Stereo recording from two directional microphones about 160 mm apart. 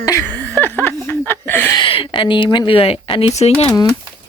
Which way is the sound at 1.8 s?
30° left (ahead or behind).